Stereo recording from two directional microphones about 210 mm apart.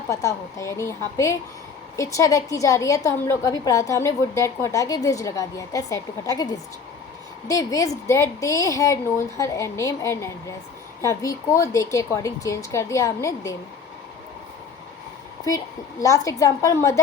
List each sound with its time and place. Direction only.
0.1 s a woman's voice: 15° left (ahead or behind)
16.0 s a woman's voice: 15° left (ahead or behind)